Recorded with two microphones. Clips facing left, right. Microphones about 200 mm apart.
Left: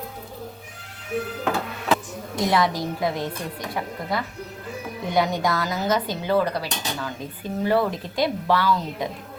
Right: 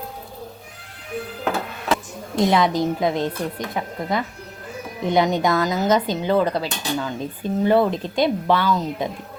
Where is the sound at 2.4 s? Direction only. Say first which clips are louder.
Right 4 dB; 20° right (ahead or behind).